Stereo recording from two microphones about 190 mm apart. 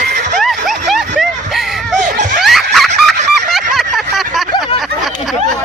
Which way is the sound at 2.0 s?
40° right (ahead or behind).